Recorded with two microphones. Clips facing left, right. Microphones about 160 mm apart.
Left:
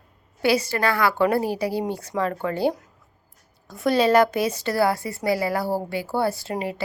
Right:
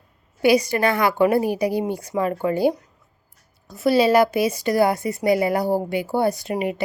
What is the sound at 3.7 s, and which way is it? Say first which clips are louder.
A woman's voice: right 2 dB; 5° right (ahead or behind).